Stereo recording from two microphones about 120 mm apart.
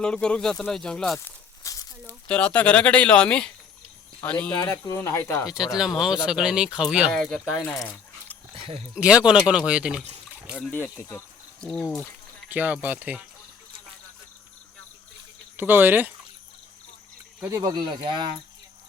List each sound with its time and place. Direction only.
0.0 s speech: 10° left (ahead or behind)
1.2 s a sound: 25° left (ahead or behind)
2.2 s speech: 10° left (ahead or behind)
4.6 s speech: 25° left (ahead or behind)
5.5 s speech: 5° right (ahead or behind)
7.1 s speech: 5° left (ahead or behind)
8.5 s a sound: 55° right (ahead or behind)
9.0 s speech: 10° right (ahead or behind)
11.6 s speech: 5° left (ahead or behind)
12.5 s speech: 15° right (ahead or behind)
15.5 s speech: 15° right (ahead or behind)
17.5 s speech: 35° right (ahead or behind)